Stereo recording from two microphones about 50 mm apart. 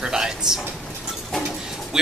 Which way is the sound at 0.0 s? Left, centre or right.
Centre.